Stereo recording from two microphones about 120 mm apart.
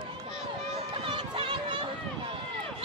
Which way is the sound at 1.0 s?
45° right (ahead or behind).